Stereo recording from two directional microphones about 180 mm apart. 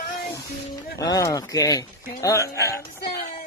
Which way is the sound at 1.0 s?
20° left (ahead or behind).